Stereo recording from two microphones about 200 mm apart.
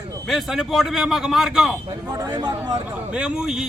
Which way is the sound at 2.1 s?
20° right (ahead or behind).